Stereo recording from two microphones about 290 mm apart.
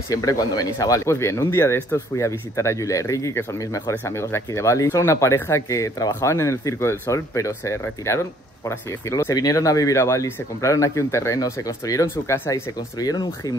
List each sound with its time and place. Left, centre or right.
0.1 s speech: centre